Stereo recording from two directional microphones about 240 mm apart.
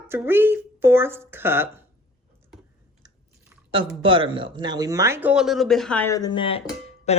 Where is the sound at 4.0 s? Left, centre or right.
Right; by 6.6 s left.